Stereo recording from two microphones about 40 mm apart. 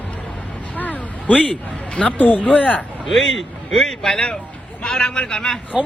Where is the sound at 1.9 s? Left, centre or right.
Left.